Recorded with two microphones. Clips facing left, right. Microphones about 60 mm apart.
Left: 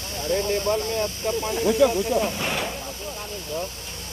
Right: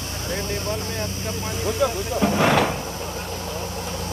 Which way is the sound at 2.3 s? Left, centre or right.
Right.